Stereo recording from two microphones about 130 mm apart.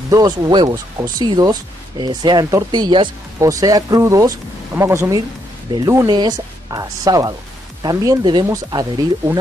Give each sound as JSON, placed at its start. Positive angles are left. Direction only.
{"t": 0.1, "sound": "speech", "side_deg": -30}
{"t": 3.3, "sound": "speech", "side_deg": -25}
{"t": 5.7, "sound": "speech", "side_deg": -35}